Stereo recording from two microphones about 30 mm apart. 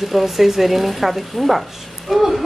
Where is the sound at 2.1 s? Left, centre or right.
Centre.